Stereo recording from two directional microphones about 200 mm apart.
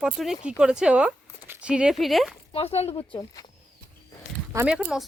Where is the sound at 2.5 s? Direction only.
30° left (ahead or behind).